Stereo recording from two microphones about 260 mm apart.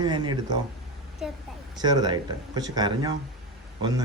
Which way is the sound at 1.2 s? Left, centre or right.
Centre.